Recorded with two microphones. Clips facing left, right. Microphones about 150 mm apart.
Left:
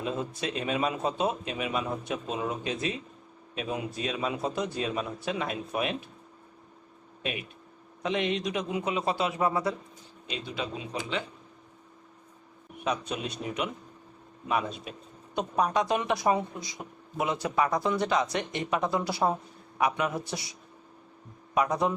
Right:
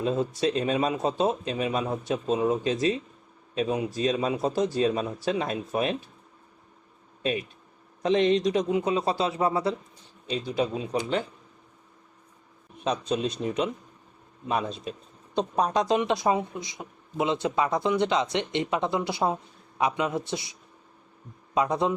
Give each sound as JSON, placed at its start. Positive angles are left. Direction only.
{"t": 0.0, "sound": "speech", "side_deg": -35}
{"t": 7.2, "sound": "speech", "side_deg": -35}
{"t": 12.8, "sound": "speech", "side_deg": -30}